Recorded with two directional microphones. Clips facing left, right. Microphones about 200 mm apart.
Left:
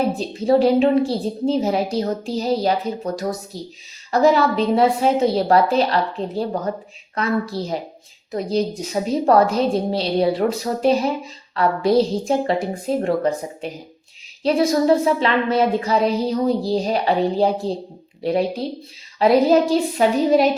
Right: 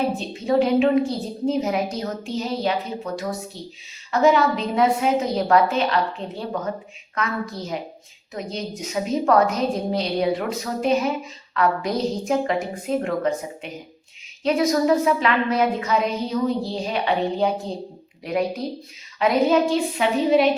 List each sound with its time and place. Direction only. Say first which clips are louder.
0.2 s a woman's voice: left 4 dB; 35° left (ahead or behind)